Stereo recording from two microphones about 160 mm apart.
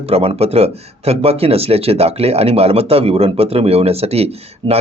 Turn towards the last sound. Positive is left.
turn(degrees=-40)  # may be behind; listen again after turning